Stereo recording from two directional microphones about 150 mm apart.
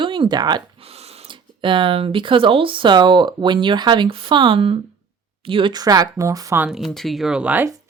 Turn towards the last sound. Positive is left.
turn(degrees=-10)  # may be behind; listen again after turning